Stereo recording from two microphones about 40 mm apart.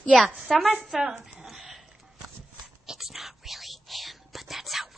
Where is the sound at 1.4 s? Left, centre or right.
Centre.